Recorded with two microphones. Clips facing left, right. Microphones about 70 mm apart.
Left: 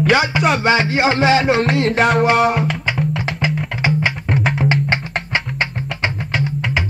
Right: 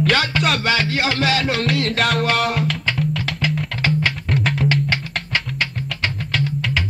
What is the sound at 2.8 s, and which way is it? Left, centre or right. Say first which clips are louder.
Music: left 2 dB; centre.